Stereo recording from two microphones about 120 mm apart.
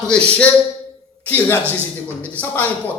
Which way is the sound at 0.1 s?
10° left (ahead or behind).